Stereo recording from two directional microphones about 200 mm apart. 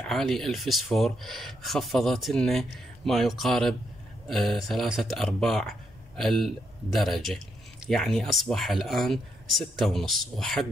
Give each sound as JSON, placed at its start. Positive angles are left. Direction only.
{"t": 0.0, "sound": "speech", "side_deg": 0}